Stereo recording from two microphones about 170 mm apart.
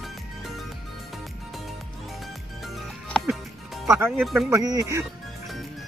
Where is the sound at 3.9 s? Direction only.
15° right (ahead or behind).